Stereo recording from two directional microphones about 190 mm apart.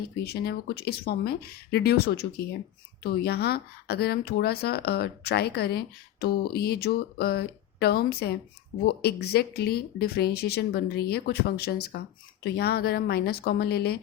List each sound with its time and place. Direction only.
0.2 s speech: 55° left (ahead or behind)